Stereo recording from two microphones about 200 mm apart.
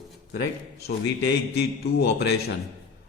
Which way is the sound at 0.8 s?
55° left (ahead or behind).